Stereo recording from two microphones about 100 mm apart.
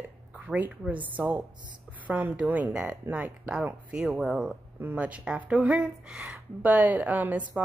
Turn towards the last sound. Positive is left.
turn(degrees=-15)  # may be behind; listen again after turning